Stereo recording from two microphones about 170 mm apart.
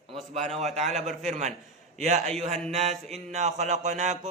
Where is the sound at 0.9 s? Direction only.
40° right (ahead or behind).